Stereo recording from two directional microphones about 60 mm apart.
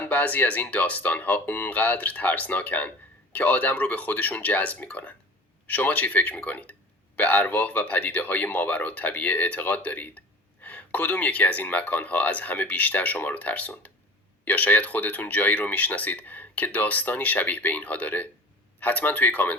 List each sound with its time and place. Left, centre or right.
0.0 s speech: left